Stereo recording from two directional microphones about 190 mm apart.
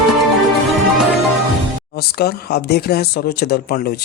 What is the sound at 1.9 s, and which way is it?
Speech, 55° left (ahead or behind).